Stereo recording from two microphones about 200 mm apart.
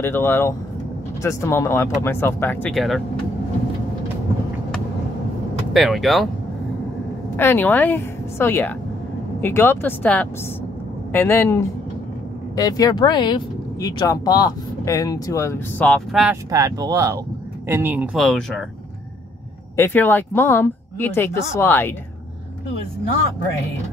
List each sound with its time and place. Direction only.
0.0 s speech: 10° left (ahead or behind)
5.7 s speech: centre (ahead or behind)
7.3 s speech: 10° left (ahead or behind)
16.4 s speech: 15° right (ahead or behind); by 18.7 s centre (ahead or behind)
19.8 s speech: 10° left (ahead or behind)